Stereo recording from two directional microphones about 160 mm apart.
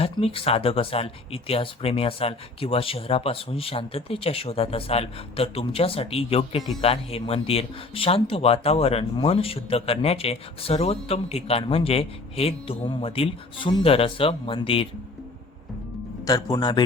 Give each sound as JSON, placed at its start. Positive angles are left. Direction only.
{"t": 0.0, "sound": "speech", "side_deg": 35}
{"t": 16.2, "sound": "speech", "side_deg": 25}